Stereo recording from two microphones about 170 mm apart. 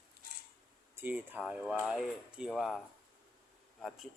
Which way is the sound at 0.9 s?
10° right (ahead or behind).